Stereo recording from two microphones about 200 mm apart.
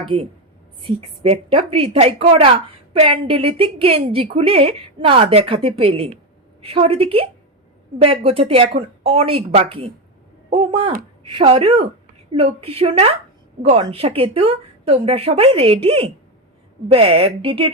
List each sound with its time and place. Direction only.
0.1 s a woman's voice: 30° right (ahead or behind)
10.5 s a sound: 30° right (ahead or behind)
11.2 s speech: 30° right (ahead or behind)